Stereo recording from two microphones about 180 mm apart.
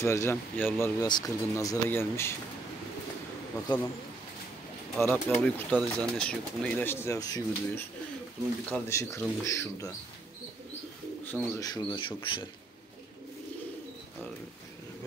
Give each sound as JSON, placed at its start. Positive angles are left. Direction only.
{"t": 0.0, "sound": "speech", "side_deg": 15}
{"t": 4.9, "sound": "speech", "side_deg": 5}
{"t": 11.2, "sound": "speech", "side_deg": 10}